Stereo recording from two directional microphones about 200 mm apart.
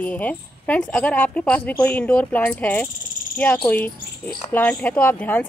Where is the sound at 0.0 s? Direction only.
10° left (ahead or behind).